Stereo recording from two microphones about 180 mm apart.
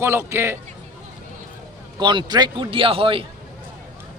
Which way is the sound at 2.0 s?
25° right (ahead or behind).